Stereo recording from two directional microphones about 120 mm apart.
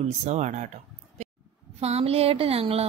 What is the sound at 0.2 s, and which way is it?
Speech, 70° right (ahead or behind).